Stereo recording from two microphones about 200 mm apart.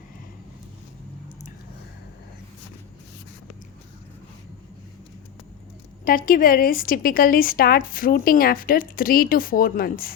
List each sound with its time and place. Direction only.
6.1 s speech: 45° left (ahead or behind)